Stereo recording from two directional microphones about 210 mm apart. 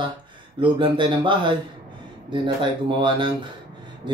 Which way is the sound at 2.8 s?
25° right (ahead or behind).